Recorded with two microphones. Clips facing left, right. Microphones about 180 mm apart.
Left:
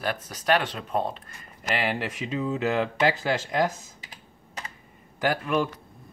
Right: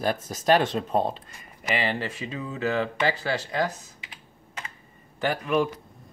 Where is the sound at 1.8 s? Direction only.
10° left (ahead or behind).